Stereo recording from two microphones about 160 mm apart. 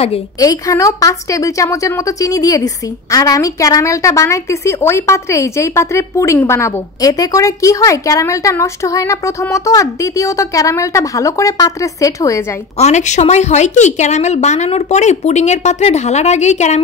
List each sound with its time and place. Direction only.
0.4 s a woman's voice: 20° left (ahead or behind)
12.7 s a woman's voice: 45° left (ahead or behind)